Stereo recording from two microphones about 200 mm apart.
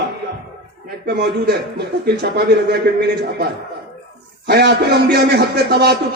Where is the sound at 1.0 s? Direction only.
55° right (ahead or behind).